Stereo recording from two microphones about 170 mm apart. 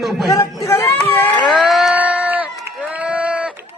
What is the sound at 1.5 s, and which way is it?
Crowd, centre (ahead or behind).